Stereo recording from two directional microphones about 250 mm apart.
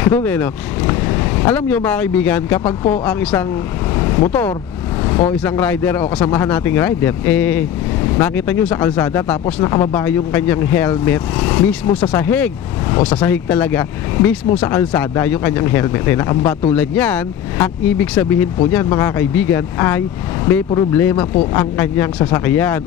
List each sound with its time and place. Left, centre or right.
0.1 s speech: centre
13.0 s speech: centre
13.3 s speech: centre